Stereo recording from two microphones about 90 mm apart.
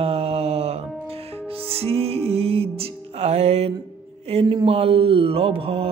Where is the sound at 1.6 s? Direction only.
90° right.